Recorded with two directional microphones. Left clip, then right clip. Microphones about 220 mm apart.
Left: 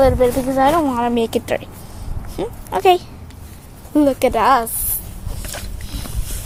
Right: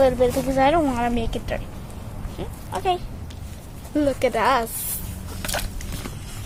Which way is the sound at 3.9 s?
25° left (ahead or behind).